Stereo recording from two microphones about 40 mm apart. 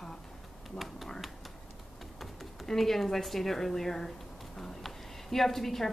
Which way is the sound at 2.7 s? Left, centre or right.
Centre.